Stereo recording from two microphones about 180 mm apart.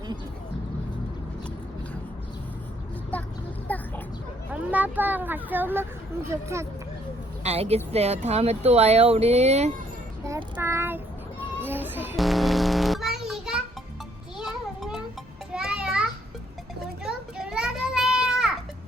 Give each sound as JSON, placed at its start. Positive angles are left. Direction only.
{"t": 3.7, "sound": "a sound", "side_deg": 10}
{"t": 4.5, "sound": "speech", "side_deg": -10}
{"t": 7.4, "sound": "speech", "side_deg": -35}
{"t": 10.2, "sound": "child singing", "side_deg": -15}
{"t": 11.6, "sound": "music", "side_deg": -10}
{"t": 12.1, "sound": "a sound", "side_deg": 0}
{"t": 14.3, "sound": "music", "side_deg": 0}
{"t": 15.5, "sound": "children playing", "side_deg": -5}